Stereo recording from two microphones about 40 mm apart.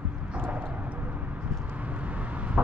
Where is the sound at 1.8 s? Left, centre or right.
Right.